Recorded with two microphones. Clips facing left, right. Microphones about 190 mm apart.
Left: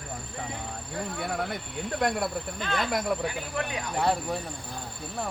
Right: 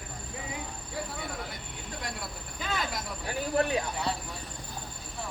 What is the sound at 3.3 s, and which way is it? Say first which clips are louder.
Speech: right 4 dB; 35° right (ahead or behind).